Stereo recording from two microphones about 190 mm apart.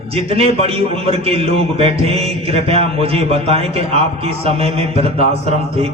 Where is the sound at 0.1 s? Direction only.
30° right (ahead or behind).